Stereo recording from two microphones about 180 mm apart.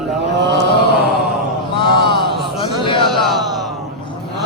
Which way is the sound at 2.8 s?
25° left (ahead or behind).